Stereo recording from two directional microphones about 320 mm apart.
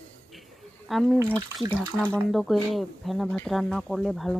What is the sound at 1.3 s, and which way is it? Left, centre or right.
Speech, centre.